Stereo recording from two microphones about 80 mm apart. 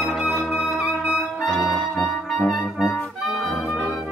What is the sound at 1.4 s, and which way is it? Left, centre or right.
Brass instrument, centre.